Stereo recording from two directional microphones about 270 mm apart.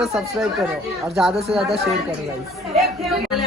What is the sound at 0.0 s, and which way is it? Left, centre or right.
Speech, centre.